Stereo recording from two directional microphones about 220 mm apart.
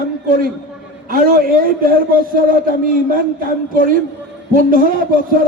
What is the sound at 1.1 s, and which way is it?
Speech, 40° right (ahead or behind).